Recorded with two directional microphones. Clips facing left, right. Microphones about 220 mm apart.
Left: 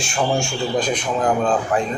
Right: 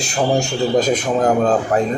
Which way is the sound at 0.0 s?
35° right (ahead or behind).